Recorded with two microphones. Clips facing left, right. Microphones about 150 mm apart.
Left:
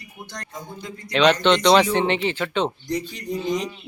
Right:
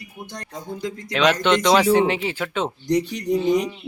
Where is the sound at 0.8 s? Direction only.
90° right.